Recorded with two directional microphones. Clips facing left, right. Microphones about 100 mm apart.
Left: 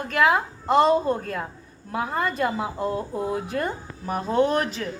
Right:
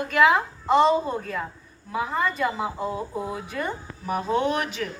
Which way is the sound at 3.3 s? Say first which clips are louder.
Left 4 dB; 50° left (ahead or behind).